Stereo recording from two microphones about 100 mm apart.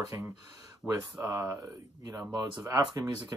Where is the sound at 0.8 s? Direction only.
10° left (ahead or behind).